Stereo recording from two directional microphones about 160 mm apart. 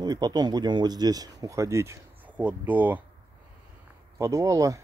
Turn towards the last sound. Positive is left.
turn(degrees=-20)  # may be behind; listen again after turning